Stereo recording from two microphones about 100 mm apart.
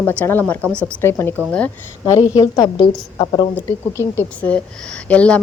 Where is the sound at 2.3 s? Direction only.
35° left (ahead or behind).